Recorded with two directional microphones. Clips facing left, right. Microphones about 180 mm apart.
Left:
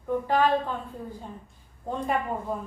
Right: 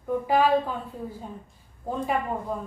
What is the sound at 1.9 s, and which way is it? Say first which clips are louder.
Speech: right 1 dB; 5° right (ahead or behind).